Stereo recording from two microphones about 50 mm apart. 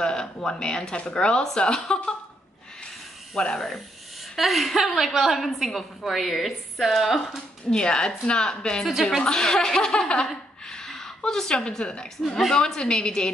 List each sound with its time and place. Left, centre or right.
0.0 s speech: centre
3.3 s a woman's voice: centre
7.7 s a woman's voice: centre